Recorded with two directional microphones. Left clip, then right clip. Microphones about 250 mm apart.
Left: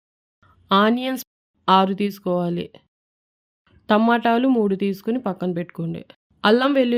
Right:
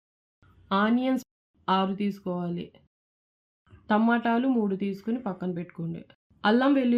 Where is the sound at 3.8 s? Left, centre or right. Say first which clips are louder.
Left 7 dB; left.